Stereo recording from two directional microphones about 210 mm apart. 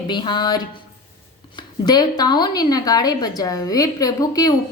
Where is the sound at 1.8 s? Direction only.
20° left (ahead or behind).